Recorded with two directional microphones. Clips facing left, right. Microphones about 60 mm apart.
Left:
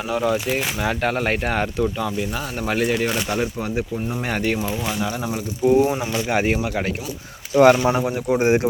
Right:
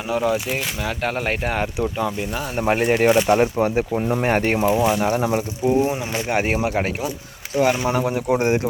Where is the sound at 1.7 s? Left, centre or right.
Centre.